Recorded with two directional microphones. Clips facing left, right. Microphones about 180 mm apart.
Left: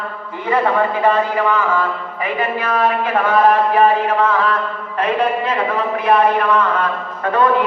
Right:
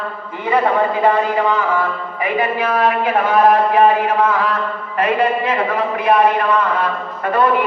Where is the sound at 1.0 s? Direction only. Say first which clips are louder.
Right 1 dB; 15° right (ahead or behind).